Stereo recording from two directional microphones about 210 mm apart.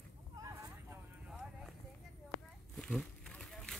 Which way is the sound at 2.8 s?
5° left (ahead or behind).